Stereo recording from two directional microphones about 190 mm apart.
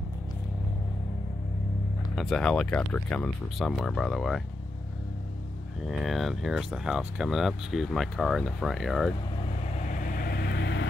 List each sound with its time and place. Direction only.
2.1 s speech: 5° left (ahead or behind)
5.9 s speech: centre (ahead or behind)
9.8 s vehicle: 45° left (ahead or behind); by 10.9 s 65° left (ahead or behind)